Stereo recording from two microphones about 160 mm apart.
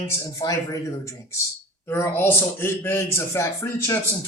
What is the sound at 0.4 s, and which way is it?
A man's voice, 20° left (ahead or behind).